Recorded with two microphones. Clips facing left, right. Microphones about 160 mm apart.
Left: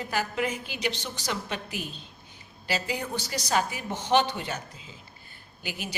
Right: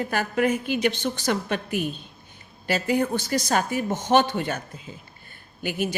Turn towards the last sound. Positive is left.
turn(degrees=-50)  # may be behind; listen again after turning